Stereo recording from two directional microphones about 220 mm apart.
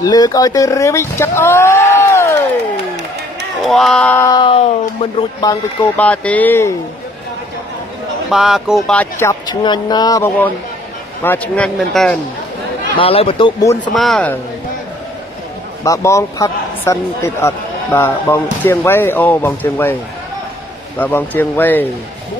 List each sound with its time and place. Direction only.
0.0 s speech: 15° left (ahead or behind)
3.6 s a man's voice: centre (ahead or behind); by 5.9 s 20° left (ahead or behind)
5.9 s a man's voice: 5° left (ahead or behind)
8.3 s a man's voice: centre (ahead or behind)
12.9 s speech: 25° left (ahead or behind)
13.9 s a man's voice: centre (ahead or behind)
15.8 s a man's voice: 15° left (ahead or behind)
21.0 s a man's voice: 10° left (ahead or behind)